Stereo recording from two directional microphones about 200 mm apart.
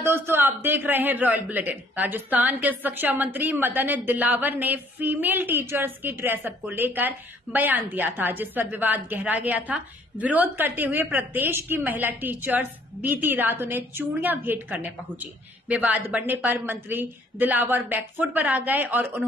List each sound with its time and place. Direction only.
0.0 s a man's voice: 10° right (ahead or behind)